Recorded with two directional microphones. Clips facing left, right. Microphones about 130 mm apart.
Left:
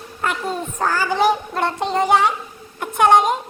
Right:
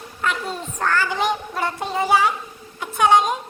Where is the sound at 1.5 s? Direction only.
5° right (ahead or behind).